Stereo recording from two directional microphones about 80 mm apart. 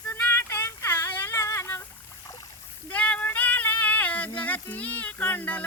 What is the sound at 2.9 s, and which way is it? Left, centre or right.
Female singing, centre.